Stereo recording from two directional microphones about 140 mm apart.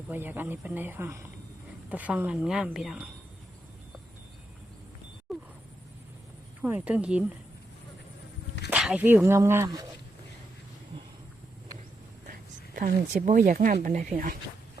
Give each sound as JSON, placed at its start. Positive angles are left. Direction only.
{"t": 0.1, "sound": "a woman's voice", "side_deg": -15}
{"t": 5.3, "sound": "a sound", "side_deg": 0}
{"t": 6.6, "sound": "a woman's voice", "side_deg": -10}
{"t": 8.7, "sound": "a woman's voice", "side_deg": -10}
{"t": 12.3, "sound": "speech", "side_deg": -85}